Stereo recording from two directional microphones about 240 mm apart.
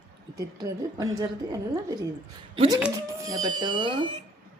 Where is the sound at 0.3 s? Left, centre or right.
Centre.